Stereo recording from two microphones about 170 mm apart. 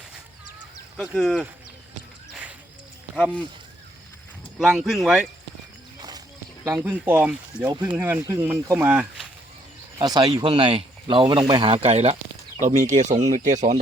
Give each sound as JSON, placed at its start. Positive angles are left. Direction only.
{"t": 0.9, "sound": "speech", "side_deg": 0}
{"t": 2.3, "sound": "a sound", "side_deg": -10}
{"t": 4.5, "sound": "speech", "side_deg": -5}
{"t": 6.0, "sound": "walk", "side_deg": -25}
{"t": 6.7, "sound": "speech", "side_deg": -15}
{"t": 7.7, "sound": "speech", "side_deg": -25}
{"t": 7.9, "sound": "speech", "side_deg": -10}
{"t": 10.0, "sound": "speech", "side_deg": -25}